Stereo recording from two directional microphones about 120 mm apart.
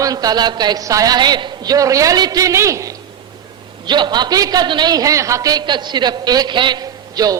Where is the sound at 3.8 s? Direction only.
40° right (ahead or behind).